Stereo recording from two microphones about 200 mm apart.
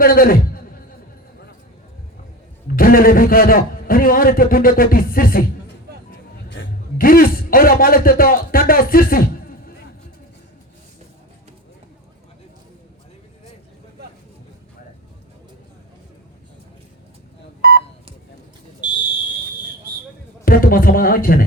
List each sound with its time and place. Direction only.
0.0 s speech: 45° left (ahead or behind)
2.7 s a man's voice: 45° left (ahead or behind)
6.1 s music: 55° left (ahead or behind)
17.6 s telephone dialing: 50° right (ahead or behind)
20.4 s a sound: 45° left (ahead or behind)